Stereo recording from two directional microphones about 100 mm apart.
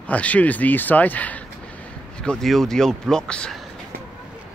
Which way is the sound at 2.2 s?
5° left (ahead or behind).